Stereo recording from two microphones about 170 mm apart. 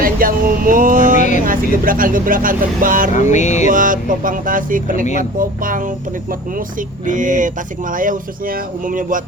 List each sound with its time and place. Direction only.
0.0 s speech: 55° right (ahead or behind)
3.2 s music: 45° left (ahead or behind)
3.7 s speech: 50° right (ahead or behind)
7.0 s speech: 50° right (ahead or behind)